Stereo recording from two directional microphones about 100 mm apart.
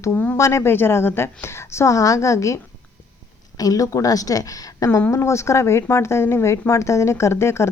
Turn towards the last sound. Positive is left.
turn(degrees=25)  # may be behind; listen again after turning